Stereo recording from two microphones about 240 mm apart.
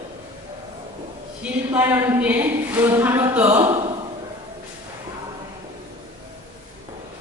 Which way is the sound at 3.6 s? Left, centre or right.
Right.